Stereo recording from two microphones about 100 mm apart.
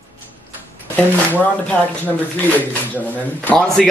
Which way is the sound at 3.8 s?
Centre (ahead or behind).